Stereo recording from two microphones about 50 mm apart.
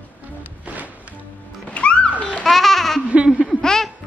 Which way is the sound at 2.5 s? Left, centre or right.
Centre.